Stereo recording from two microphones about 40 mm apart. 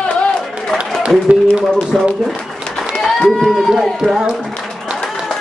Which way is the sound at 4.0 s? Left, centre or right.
Centre.